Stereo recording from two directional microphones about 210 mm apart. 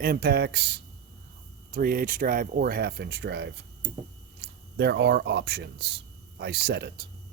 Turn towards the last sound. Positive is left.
turn(degrees=-50)  # may be behind; listen again after turning